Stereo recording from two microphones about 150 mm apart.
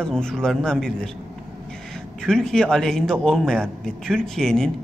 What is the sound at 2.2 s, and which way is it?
Speech, 5° left (ahead or behind).